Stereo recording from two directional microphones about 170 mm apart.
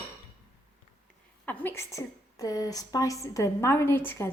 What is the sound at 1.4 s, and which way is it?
A woman's voice, 10° left (ahead or behind).